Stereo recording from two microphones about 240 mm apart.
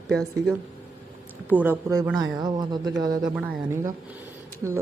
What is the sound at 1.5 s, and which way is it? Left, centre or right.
A woman's voice, centre.